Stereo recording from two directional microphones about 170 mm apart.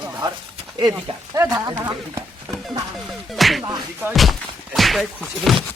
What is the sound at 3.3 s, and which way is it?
Music, centre (ahead or behind).